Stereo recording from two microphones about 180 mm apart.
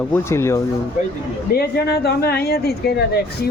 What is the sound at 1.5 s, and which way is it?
A woman's voice, 60° left (ahead or behind).